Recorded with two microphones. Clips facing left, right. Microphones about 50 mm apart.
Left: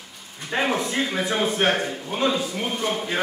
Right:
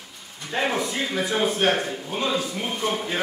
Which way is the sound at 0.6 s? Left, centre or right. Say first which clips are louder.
Left 1 dB; centre.